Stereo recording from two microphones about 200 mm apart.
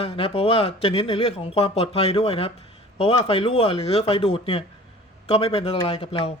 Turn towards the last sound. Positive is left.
turn(degrees=30)  # may be behind; listen again after turning